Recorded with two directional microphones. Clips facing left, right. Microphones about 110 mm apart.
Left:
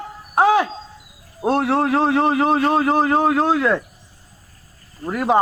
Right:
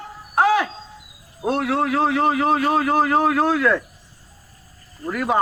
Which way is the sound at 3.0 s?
30° left (ahead or behind).